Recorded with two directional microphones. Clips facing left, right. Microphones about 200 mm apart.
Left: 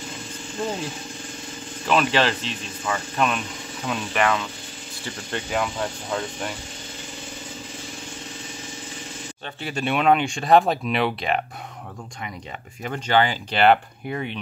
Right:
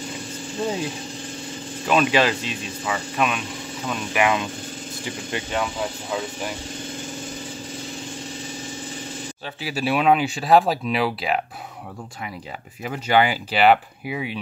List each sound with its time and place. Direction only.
1.9 s speech: 10° right (ahead or behind)
4.2 s speech: 15° right (ahead or behind)
5.5 s speech: centre (ahead or behind)
9.6 s speech: 5° right (ahead or behind)
12.8 s speech: 10° right (ahead or behind)